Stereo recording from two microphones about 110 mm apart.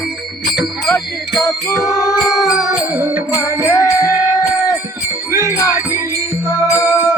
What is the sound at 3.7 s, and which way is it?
Music, 30° left (ahead or behind).